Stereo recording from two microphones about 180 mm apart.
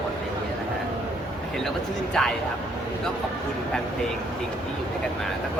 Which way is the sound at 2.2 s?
5° left (ahead or behind).